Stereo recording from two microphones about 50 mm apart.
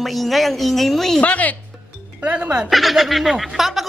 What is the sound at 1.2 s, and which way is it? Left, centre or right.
Speech, left.